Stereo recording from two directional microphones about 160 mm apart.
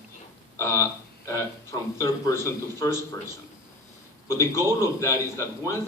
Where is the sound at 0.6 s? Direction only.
15° left (ahead or behind).